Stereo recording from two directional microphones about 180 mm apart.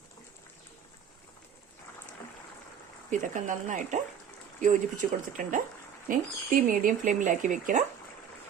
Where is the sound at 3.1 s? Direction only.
45° right (ahead or behind).